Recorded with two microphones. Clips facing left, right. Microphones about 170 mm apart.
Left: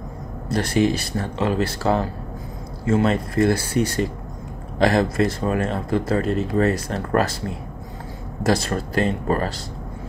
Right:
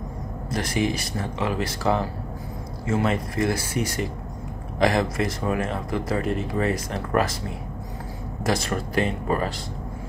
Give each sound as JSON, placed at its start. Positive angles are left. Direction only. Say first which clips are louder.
{"t": 0.5, "sound": "speech", "louder": "left 5 dB", "side_deg": 30}
{"t": 8.5, "sound": "speech", "louder": "left 4 dB", "side_deg": 35}